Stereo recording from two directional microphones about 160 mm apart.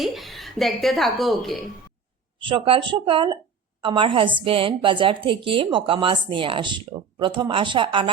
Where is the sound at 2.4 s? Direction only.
30° right (ahead or behind).